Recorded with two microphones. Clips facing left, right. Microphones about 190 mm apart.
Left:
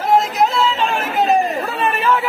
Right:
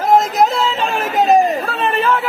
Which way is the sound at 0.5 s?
40° right (ahead or behind).